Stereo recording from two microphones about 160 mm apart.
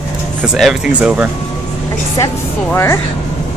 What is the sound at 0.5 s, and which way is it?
Speech, 5° right (ahead or behind).